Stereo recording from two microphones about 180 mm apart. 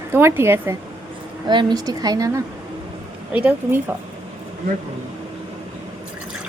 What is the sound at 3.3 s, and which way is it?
Speech, 10° right (ahead or behind).